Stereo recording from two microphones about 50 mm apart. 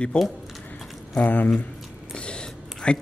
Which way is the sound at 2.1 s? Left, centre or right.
Centre.